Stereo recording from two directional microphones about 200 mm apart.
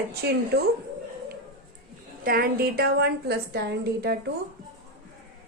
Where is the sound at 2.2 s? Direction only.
50° right (ahead or behind).